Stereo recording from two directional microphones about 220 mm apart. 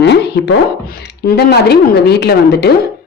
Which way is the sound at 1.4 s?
45° left (ahead or behind).